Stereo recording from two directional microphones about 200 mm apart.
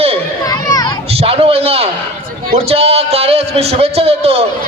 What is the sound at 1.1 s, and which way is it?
A man's voice, 30° right (ahead or behind).